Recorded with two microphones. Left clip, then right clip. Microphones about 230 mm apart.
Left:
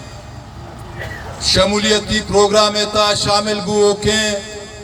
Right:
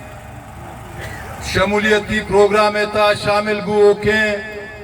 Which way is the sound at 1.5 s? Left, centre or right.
Left.